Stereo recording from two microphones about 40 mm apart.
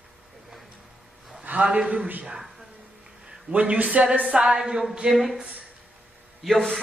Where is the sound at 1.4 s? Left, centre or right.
Right.